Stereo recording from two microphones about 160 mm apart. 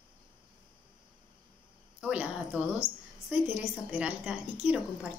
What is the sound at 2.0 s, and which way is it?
Speech, 10° right (ahead or behind).